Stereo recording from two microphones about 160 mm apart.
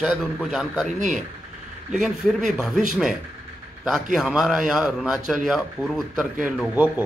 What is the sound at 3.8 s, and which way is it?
A man's voice, centre (ahead or behind).